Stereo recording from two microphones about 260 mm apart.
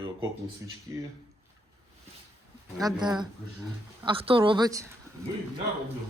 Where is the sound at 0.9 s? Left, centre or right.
Centre.